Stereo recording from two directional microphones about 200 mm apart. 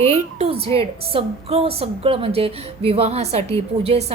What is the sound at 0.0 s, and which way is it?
A woman's voice, 30° right (ahead or behind).